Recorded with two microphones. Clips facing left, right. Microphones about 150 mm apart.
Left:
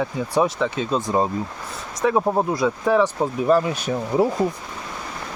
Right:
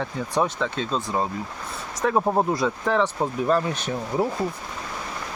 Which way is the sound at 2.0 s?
Centre (ahead or behind).